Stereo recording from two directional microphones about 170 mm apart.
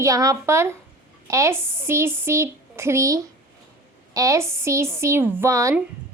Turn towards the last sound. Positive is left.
turn(degrees=-15)  # may be behind; listen again after turning